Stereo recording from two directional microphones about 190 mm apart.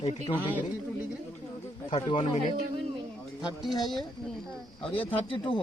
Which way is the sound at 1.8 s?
30° left (ahead or behind).